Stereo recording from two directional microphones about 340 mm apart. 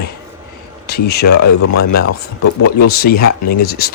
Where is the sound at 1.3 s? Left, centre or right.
Left.